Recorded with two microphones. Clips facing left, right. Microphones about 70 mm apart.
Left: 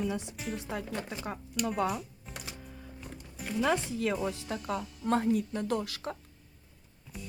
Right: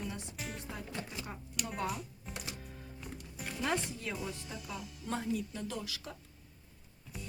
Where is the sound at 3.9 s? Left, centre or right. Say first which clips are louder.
Left 9 dB; left.